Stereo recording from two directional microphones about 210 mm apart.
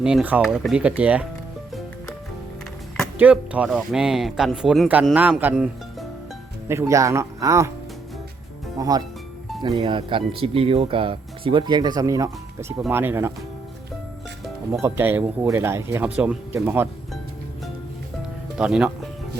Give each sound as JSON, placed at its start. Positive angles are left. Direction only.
{"t": 0.0, "sound": "speech", "side_deg": -5}
{"t": 3.2, "sound": "speech", "side_deg": -5}
{"t": 8.8, "sound": "speech", "side_deg": -15}
{"t": 14.7, "sound": "speech", "side_deg": -10}
{"t": 18.5, "sound": "speech", "side_deg": -5}